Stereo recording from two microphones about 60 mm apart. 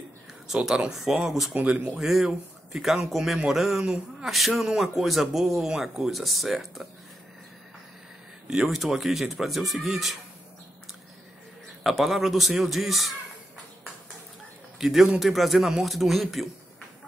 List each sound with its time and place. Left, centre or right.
0.7 s speech: centre
1.5 s speech: right
2.0 s speech: centre
8.5 s speech: centre
11.8 s speech: centre
14.8 s speech: centre